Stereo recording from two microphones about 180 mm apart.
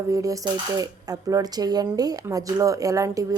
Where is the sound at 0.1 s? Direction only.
20° right (ahead or behind).